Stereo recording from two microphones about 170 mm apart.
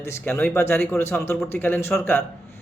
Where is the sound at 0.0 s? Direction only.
15° left (ahead or behind).